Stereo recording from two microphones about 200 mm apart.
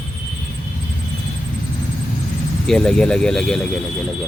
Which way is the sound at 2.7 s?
Centre (ahead or behind).